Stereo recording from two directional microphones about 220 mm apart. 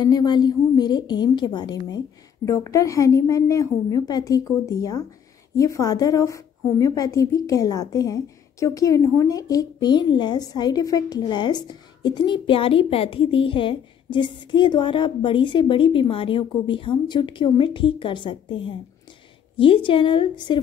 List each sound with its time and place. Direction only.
0.0 s a woman's voice: 20° left (ahead or behind)